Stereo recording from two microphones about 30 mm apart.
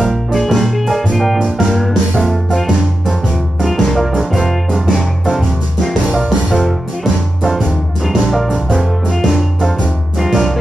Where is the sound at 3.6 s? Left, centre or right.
Centre.